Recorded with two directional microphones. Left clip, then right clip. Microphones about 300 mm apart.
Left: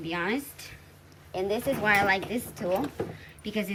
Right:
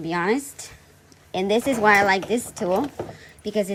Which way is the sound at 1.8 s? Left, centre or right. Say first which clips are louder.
Right 7 dB; left.